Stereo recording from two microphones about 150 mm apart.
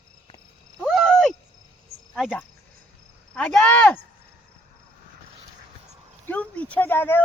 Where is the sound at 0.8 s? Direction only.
5° left (ahead or behind).